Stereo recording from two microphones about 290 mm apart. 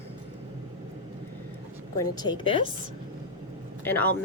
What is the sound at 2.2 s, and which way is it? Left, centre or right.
Speech, centre.